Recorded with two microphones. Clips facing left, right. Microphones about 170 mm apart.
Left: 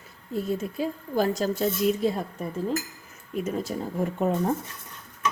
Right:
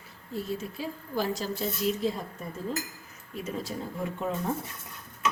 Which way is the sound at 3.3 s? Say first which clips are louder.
Left 6 dB; 45° left (ahead or behind).